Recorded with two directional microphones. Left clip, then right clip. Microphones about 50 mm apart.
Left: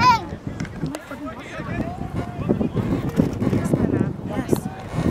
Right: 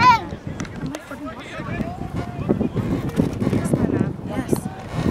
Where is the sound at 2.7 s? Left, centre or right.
Centre.